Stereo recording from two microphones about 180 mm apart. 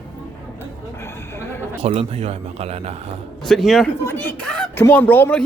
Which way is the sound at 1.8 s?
35° right (ahead or behind).